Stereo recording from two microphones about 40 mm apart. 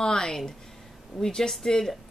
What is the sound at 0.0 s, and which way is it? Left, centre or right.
A woman's voice, centre.